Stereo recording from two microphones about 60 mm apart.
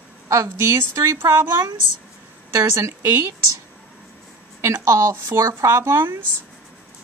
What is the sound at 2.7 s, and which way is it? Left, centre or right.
Speech, right.